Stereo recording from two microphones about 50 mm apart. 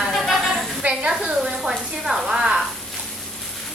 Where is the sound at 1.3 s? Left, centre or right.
Centre.